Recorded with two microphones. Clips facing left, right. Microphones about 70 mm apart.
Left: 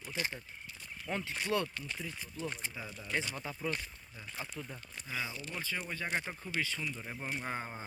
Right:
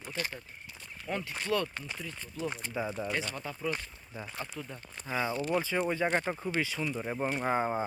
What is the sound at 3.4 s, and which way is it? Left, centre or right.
Speech, centre.